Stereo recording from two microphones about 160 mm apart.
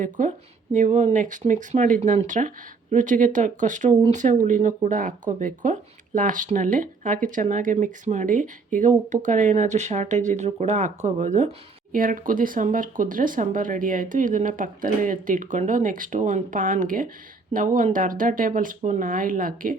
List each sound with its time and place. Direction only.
0.0 s speech: 55° right (ahead or behind)
11.9 s speech: 60° right (ahead or behind)